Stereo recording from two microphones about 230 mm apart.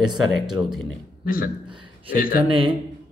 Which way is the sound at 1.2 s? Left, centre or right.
Left.